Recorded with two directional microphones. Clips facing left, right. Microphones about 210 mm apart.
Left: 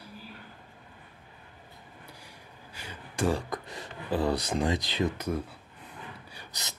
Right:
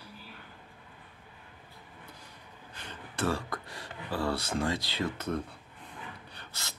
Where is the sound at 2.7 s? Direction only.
10° left (ahead or behind).